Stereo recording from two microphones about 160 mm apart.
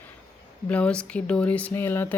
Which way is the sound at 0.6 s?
5° left (ahead or behind).